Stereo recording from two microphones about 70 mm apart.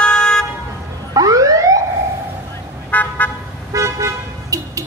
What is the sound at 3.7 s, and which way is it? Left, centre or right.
Car, right.